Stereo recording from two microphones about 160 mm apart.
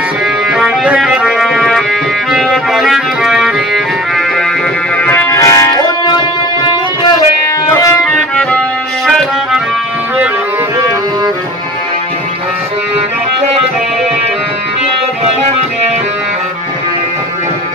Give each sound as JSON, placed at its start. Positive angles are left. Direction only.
{"t": 0.5, "sound": "music", "side_deg": -5}
{"t": 4.9, "sound": "music", "side_deg": 10}
{"t": 7.7, "sound": "music", "side_deg": 20}
{"t": 8.4, "sound": "music", "side_deg": 5}